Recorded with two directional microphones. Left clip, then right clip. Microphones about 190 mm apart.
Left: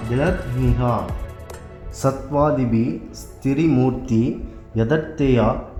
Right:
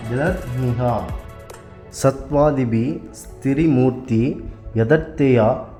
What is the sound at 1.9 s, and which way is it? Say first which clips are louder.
A man's voice: right 3 dB; 25° right (ahead or behind).